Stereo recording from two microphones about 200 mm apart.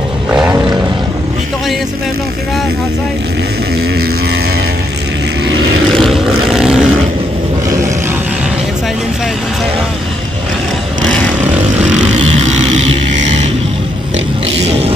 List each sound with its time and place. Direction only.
0.3 s vehicle: 5° right (ahead or behind)
5.9 s vehicle: centre (ahead or behind)
12.3 s a sound: 35° right (ahead or behind)